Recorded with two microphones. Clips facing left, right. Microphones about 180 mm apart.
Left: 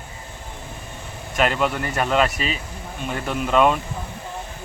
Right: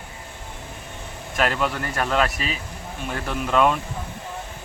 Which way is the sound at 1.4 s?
5° left (ahead or behind).